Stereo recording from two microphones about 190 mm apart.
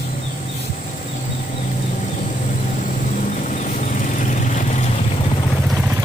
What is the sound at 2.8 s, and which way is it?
Vehicle, 40° left (ahead or behind).